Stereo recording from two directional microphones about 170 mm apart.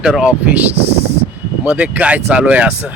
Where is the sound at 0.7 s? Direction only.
35° right (ahead or behind).